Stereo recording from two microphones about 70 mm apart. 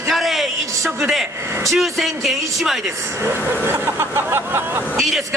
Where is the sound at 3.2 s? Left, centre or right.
Right.